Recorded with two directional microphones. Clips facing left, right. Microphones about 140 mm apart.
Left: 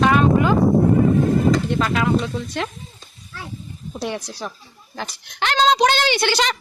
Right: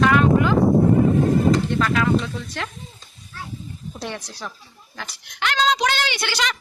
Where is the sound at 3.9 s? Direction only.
10° left (ahead or behind).